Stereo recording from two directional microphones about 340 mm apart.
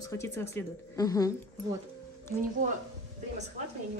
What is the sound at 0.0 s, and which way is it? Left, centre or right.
Speech, centre.